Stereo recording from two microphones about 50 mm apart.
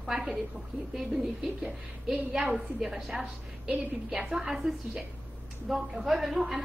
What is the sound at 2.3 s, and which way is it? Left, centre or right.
Speech, right.